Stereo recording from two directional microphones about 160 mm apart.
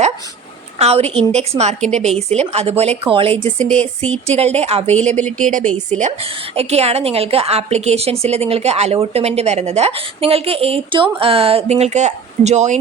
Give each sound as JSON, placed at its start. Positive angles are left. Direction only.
{"t": 0.8, "sound": "a woman's voice", "side_deg": -40}
{"t": 3.6, "sound": "speech", "side_deg": 10}
{"t": 4.4, "sound": "a woman's voice", "side_deg": -40}
{"t": 5.4, "sound": "a woman's voice", "side_deg": -55}